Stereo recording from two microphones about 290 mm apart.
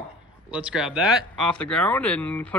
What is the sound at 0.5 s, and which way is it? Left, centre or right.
Speech, centre.